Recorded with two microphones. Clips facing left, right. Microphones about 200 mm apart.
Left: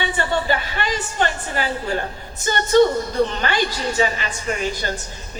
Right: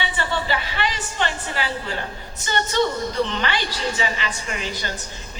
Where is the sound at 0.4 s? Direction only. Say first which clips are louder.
Left 2 dB; 45° left (ahead or behind).